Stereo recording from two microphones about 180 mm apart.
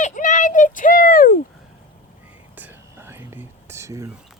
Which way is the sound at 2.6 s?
10° right (ahead or behind).